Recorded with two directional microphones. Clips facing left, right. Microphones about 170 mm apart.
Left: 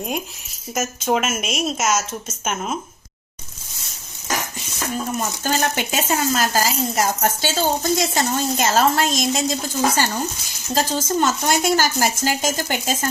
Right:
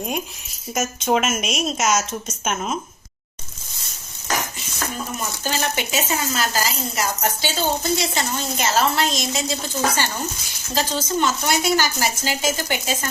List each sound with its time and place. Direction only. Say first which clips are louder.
0.7 s speech: even; 5° left (ahead or behind)
5.4 s speech: left 1 dB; 50° left (ahead or behind)